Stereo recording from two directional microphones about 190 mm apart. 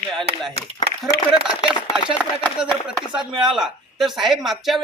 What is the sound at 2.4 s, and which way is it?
A man's voice, 5° left (ahead or behind).